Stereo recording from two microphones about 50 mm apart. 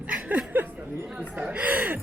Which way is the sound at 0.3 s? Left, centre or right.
Right.